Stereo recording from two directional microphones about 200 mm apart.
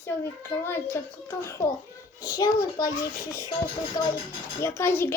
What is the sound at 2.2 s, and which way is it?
Speech, 15° left (ahead or behind).